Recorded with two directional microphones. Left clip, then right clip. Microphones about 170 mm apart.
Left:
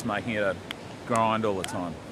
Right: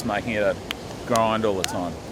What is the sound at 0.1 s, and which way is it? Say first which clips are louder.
Speech: right 5 dB; 30° left (ahead or behind).